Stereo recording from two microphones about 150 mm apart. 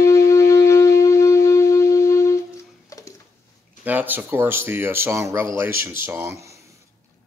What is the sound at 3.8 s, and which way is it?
Speech, 10° right (ahead or behind).